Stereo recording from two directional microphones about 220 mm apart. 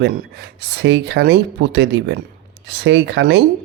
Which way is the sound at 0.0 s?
50° right (ahead or behind).